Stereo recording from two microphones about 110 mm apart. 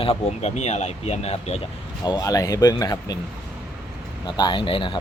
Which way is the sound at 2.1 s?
35° left (ahead or behind).